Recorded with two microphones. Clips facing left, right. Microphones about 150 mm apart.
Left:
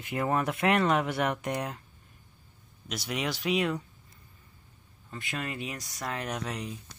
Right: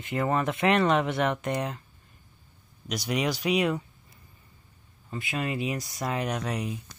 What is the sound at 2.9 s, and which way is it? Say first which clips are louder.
Speech: right 5 dB; centre (ahead or behind).